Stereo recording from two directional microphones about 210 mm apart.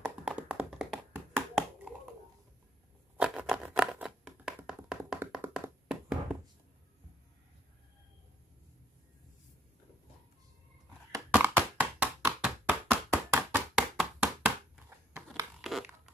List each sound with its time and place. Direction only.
0.2 s tap: 5° right (ahead or behind)
3.2 s a sound: 5° right (ahead or behind)
11.1 s tap: 10° right (ahead or behind)
15.6 s crumpling: 5° right (ahead or behind)